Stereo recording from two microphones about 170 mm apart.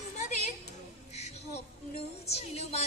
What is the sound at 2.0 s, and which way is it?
Music, 35° left (ahead or behind).